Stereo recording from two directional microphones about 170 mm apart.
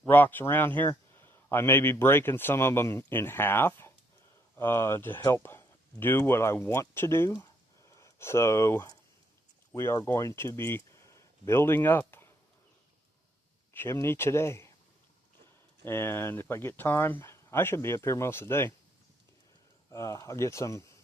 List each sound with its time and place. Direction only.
0.0 s a man's voice: 10° left (ahead or behind)
13.7 s a man's voice: 15° left (ahead or behind)
15.8 s a man's voice: 15° left (ahead or behind)
19.9 s a man's voice: 20° left (ahead or behind)